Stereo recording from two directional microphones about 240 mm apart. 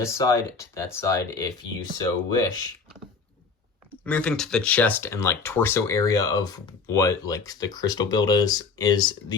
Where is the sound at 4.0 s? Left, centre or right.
Centre.